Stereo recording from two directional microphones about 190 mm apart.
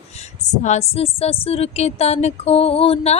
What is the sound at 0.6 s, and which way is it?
Speech, 35° left (ahead or behind).